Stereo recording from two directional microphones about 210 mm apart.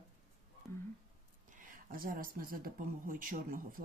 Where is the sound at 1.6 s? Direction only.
40° right (ahead or behind).